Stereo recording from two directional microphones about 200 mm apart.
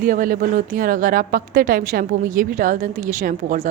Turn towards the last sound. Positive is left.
turn(degrees=-40)  # may be behind; listen again after turning